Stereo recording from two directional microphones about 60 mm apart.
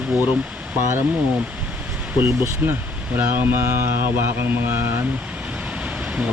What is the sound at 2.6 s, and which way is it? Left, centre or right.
Speech, right.